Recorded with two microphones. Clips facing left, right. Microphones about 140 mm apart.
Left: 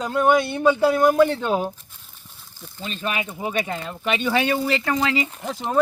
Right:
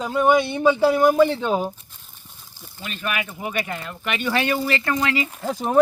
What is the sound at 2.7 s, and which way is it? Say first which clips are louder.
Speech: left 1 dB; 25° left (ahead or behind).